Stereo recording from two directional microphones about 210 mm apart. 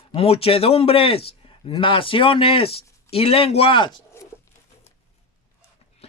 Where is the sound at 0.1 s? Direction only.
25° left (ahead or behind).